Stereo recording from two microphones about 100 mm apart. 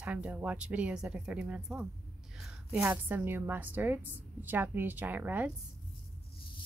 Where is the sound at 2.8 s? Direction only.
20° right (ahead or behind).